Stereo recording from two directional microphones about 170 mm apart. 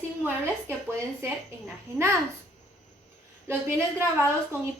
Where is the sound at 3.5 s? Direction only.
15° right (ahead or behind).